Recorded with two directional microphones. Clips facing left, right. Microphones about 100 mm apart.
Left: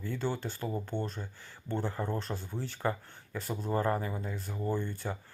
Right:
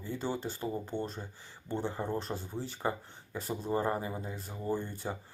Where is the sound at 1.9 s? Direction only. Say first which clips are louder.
Even; 20° right (ahead or behind).